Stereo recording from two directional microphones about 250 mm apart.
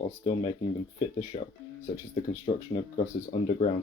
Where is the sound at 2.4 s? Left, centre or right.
Left.